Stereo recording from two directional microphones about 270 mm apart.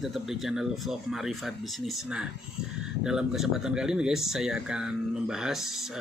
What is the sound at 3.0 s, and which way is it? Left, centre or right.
Speech, centre.